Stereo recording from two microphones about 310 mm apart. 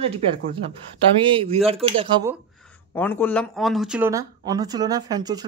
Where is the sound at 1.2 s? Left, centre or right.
Centre.